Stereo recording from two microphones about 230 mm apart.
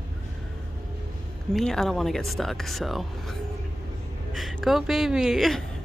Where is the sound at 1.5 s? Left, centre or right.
Centre.